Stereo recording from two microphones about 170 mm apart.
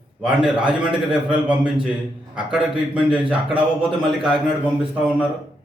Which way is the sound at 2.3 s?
5° right (ahead or behind).